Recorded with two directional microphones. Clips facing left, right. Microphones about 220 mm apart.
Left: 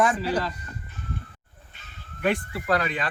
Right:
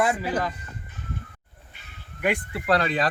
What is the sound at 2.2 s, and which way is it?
Speech, 15° right (ahead or behind).